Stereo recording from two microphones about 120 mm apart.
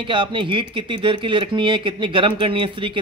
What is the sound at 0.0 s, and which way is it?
Speech, 45° right (ahead or behind).